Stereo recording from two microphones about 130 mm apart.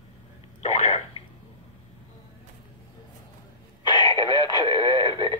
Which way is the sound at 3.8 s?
35° left (ahead or behind).